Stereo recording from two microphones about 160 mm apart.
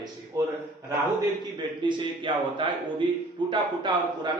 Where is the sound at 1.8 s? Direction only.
30° right (ahead or behind).